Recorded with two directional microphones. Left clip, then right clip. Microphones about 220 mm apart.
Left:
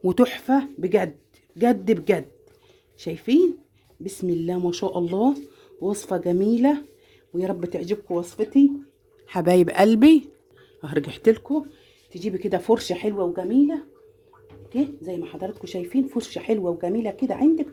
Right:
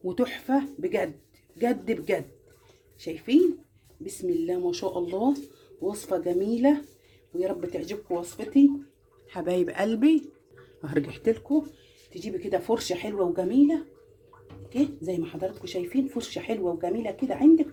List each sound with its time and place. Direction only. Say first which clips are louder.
0.0 s speech: left 8 dB; 50° left (ahead or behind)
10.8 s speech: left 2 dB; 15° left (ahead or behind)
11.1 s speech: left 10 dB; 40° left (ahead or behind)
12.2 s speech: left 4 dB; 50° left (ahead or behind)
14.7 s speech: left 1 dB; 40° left (ahead or behind)